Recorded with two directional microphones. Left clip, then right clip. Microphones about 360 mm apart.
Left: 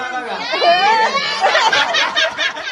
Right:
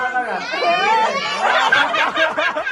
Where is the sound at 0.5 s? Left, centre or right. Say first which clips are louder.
Left 4 dB; left.